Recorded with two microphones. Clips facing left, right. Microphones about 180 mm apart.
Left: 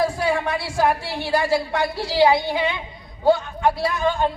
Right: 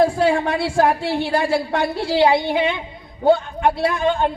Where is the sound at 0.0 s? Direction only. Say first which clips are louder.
Right 5 dB; 55° right (ahead or behind).